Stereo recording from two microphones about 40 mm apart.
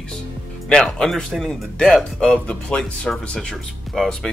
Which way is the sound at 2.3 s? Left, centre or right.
Left.